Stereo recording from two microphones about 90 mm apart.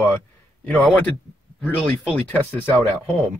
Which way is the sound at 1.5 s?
15° left (ahead or behind).